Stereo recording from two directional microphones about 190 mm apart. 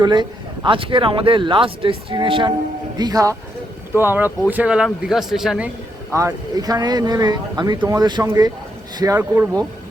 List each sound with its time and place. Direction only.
0.0 s a man's voice: 25° right (ahead or behind)